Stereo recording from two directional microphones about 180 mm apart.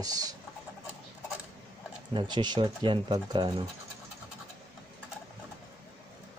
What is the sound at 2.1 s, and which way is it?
Speech, 25° right (ahead or behind).